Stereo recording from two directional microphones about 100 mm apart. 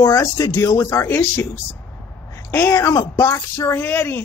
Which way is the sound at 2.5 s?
25° left (ahead or behind).